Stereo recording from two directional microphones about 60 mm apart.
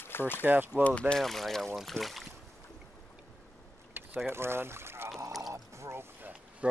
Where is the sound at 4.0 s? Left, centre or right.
Right.